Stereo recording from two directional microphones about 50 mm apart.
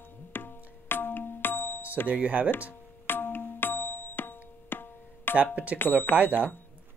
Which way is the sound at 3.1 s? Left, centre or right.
Left.